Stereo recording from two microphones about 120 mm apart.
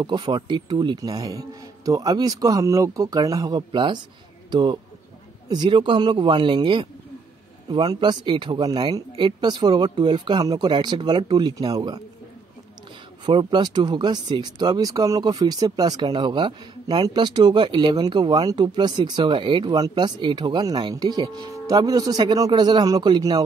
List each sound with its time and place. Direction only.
0.0 s speech: 40° right (ahead or behind)
13.2 s speech: 40° right (ahead or behind)